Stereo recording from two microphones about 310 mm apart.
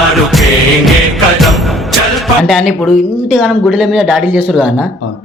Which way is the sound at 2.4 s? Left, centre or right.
Centre.